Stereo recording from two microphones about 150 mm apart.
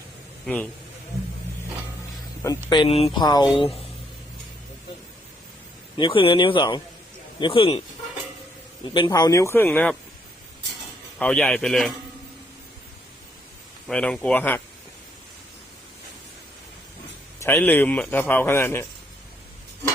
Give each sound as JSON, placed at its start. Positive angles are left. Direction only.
{"t": 0.4, "sound": "a man's voice", "side_deg": 10}
{"t": 2.6, "sound": "speech", "side_deg": 30}
{"t": 6.0, "sound": "speech", "side_deg": 35}
{"t": 8.9, "sound": "speech", "side_deg": 30}
{"t": 9.6, "sound": "a man's voice", "side_deg": 5}
{"t": 11.2, "sound": "a man's voice", "side_deg": 5}
{"t": 13.8, "sound": "a man's voice", "side_deg": 5}
{"t": 17.4, "sound": "a man's voice", "side_deg": 15}